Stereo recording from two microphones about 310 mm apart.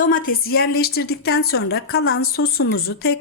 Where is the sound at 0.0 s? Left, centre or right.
Left.